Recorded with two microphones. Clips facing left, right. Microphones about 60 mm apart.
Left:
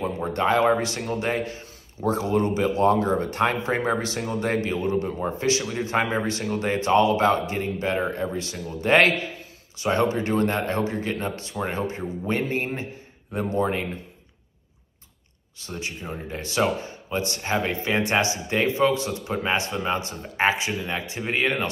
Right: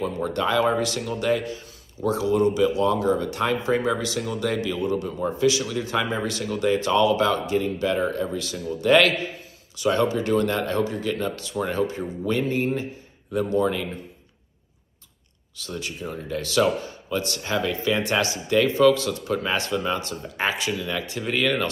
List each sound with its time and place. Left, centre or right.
0.0 s a man's voice: left
15.5 s speech: left